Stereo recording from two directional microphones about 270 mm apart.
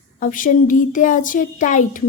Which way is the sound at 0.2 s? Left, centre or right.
Left.